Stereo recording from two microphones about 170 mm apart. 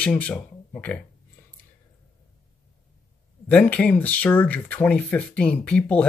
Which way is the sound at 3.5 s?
5° left (ahead or behind).